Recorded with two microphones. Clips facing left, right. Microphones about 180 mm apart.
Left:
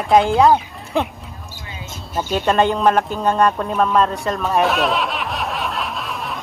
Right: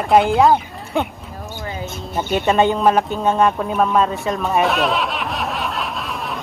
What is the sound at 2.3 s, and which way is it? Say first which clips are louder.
Speech: right 1 dB; 5° right (ahead or behind).